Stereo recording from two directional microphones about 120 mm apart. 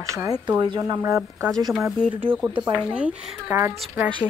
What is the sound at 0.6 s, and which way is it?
Speech, 40° right (ahead or behind).